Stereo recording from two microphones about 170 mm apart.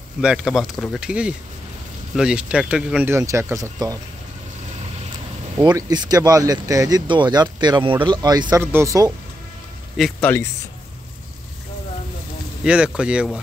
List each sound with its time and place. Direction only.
0.2 s speech: 5° right (ahead or behind); by 4.0 s 20° right (ahead or behind)
5.7 s speech: 25° right (ahead or behind)
10.2 s a man's voice: 15° left (ahead or behind)
12.6 s speech: 5° right (ahead or behind)